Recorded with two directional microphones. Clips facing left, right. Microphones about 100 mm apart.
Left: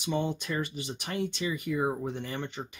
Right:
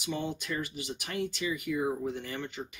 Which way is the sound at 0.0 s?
30° left (ahead or behind).